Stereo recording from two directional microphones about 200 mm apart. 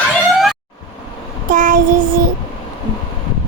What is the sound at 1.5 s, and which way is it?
Child singing, 40° right (ahead or behind).